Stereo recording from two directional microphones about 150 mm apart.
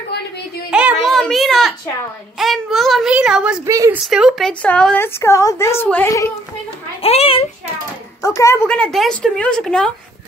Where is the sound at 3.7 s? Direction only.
20° right (ahead or behind).